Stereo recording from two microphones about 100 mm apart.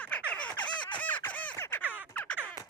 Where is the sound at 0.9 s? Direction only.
15° left (ahead or behind).